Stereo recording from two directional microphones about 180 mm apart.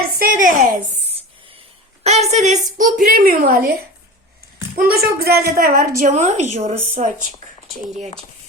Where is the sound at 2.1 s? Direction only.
40° right (ahead or behind).